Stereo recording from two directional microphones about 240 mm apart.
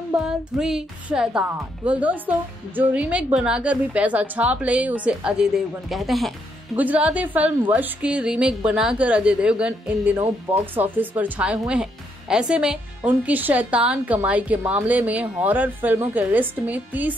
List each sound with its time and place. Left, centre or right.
0.2 s speech: centre